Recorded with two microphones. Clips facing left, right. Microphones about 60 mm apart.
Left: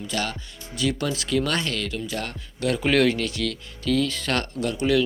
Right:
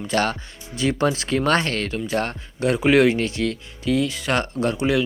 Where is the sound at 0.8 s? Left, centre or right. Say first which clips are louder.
Right 5 dB; right.